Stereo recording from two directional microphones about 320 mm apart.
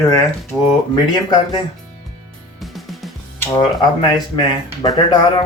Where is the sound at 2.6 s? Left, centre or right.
Centre.